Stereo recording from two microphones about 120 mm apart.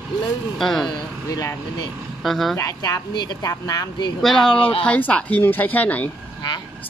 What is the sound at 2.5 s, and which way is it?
A woman's voice, 30° left (ahead or behind).